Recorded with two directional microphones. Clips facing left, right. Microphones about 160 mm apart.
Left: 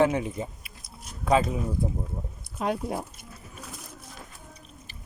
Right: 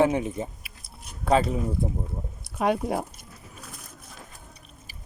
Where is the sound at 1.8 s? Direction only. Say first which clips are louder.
Even; 20° right (ahead or behind).